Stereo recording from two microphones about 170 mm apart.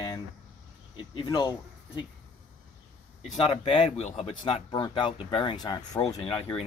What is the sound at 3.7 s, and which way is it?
Speech, 40° left (ahead or behind).